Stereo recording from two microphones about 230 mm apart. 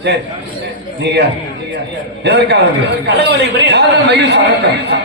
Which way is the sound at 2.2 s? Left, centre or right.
Right.